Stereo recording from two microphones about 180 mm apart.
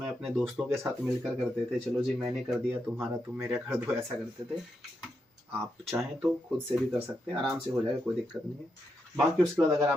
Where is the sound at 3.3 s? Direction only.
10° right (ahead or behind).